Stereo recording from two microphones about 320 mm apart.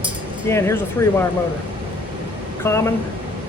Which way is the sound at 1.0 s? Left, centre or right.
Centre.